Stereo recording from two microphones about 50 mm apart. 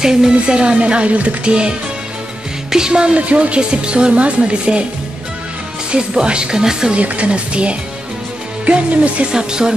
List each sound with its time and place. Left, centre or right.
0.0 s a woman's voice: centre
5.9 s speech: centre
7.0 s a woman's voice: right